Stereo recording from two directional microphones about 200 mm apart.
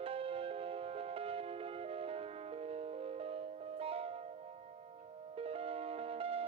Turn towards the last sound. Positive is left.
turn(degrees=-30)  # may be behind; listen again after turning